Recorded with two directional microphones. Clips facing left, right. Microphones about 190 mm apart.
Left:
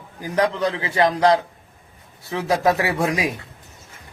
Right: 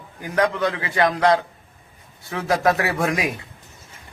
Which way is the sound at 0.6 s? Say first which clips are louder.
Left 1 dB; 30° left (ahead or behind).